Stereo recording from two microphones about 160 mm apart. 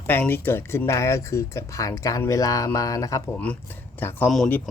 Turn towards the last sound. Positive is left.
turn(degrees=5)  # may be behind; listen again after turning